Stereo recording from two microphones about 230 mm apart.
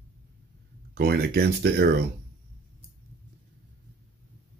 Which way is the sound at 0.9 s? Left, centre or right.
Right.